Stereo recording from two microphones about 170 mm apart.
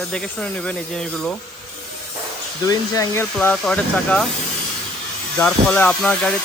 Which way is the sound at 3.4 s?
5° left (ahead or behind).